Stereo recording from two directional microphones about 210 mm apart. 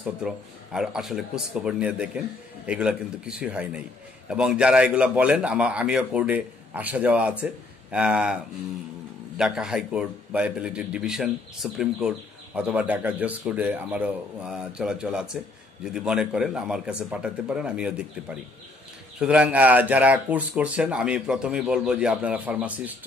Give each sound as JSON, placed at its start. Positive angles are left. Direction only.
{"t": 0.2, "sound": "a man's voice", "side_deg": -5}
{"t": 9.4, "sound": "a man's voice", "side_deg": -5}
{"t": 19.1, "sound": "speech", "side_deg": -5}